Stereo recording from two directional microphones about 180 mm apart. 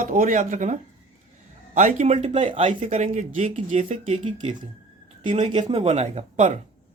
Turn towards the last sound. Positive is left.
turn(degrees=-40)  # may be behind; listen again after turning